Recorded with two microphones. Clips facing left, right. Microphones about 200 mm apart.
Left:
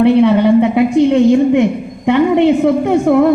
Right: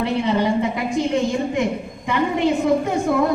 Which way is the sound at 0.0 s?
60° left (ahead or behind).